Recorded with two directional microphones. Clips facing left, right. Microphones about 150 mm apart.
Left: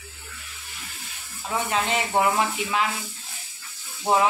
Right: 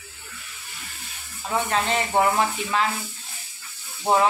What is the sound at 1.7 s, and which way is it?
Speech, 5° left (ahead or behind).